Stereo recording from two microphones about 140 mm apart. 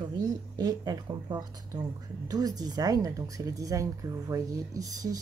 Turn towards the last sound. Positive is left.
turn(degrees=-25)  # may be behind; listen again after turning